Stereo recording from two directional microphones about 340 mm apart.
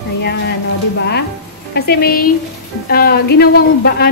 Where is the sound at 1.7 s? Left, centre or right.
Left.